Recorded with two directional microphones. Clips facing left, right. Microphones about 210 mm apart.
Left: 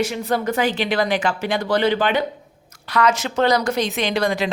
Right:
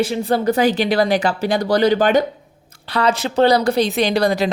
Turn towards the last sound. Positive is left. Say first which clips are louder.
# right 4 dB
turn(degrees=-40)  # may be behind; listen again after turning